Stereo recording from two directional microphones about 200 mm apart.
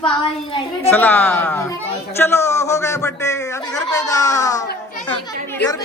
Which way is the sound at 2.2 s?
10° left (ahead or behind).